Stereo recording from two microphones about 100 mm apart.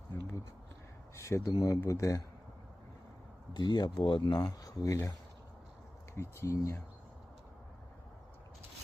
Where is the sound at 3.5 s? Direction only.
45° left (ahead or behind).